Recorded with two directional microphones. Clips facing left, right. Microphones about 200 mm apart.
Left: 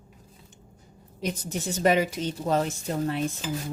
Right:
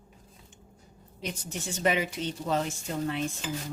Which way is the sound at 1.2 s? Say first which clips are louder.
Left 6 dB; 40° left (ahead or behind).